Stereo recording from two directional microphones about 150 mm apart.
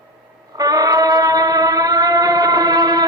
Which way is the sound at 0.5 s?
25° right (ahead or behind).